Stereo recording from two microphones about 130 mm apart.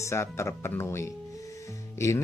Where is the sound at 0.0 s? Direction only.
20° left (ahead or behind).